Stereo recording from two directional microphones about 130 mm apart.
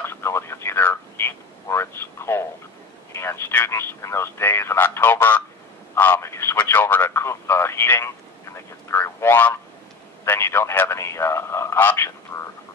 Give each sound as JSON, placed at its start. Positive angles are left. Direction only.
{"t": 0.0, "sound": "radio", "side_deg": 20}
{"t": 3.1, "sound": "speech", "side_deg": 20}
{"t": 5.9, "sound": "telephone", "side_deg": 15}
{"t": 10.2, "sound": "a sound", "side_deg": 20}